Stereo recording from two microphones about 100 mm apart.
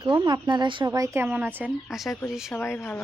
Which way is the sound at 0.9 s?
30° right (ahead or behind).